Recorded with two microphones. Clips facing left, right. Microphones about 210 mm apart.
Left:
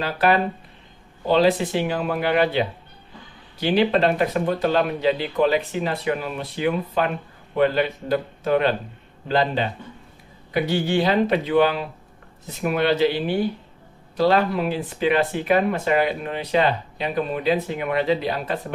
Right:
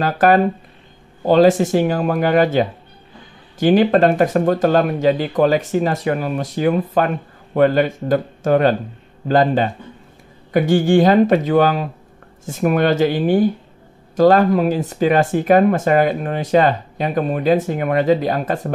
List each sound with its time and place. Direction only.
0.0 s speech: 45° right (ahead or behind)